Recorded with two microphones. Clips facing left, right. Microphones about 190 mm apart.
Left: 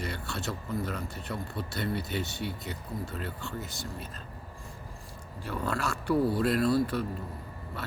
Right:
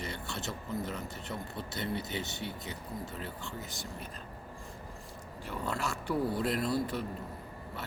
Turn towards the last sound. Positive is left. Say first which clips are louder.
# left 6 dB
turn(degrees=-20)  # may be behind; listen again after turning